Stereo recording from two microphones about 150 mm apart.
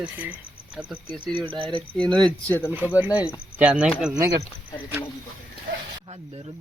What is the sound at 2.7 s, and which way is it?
Speech, 10° right (ahead or behind).